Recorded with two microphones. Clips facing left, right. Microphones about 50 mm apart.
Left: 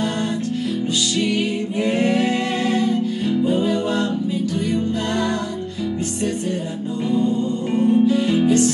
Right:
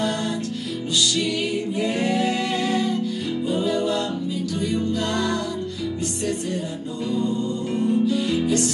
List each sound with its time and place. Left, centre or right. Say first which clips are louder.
1.8 s singing: left 5 dB; left
3.4 s music: even; left
7.7 s music: left 5 dB; left